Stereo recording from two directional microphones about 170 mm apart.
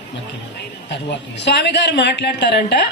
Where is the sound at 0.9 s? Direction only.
90° left.